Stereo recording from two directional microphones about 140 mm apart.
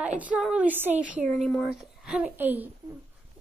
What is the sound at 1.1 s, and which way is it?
Speech, 5° right (ahead or behind).